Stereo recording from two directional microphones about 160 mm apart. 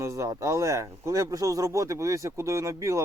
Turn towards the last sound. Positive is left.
turn(degrees=-20)  # may be behind; listen again after turning